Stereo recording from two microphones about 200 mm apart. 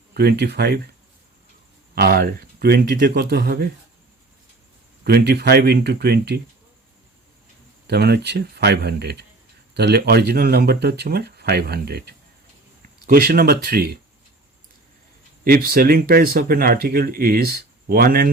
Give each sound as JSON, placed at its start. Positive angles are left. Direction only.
{"t": 0.1, "sound": "speech", "side_deg": -55}
{"t": 2.0, "sound": "speech", "side_deg": -50}
{"t": 5.0, "sound": "speech", "side_deg": -55}
{"t": 7.9, "sound": "speech", "side_deg": -50}
{"t": 15.4, "sound": "speech", "side_deg": -50}